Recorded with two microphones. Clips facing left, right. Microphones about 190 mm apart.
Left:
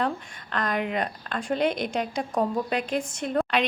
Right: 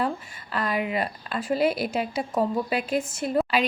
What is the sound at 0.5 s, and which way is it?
Speech, 5° right (ahead or behind).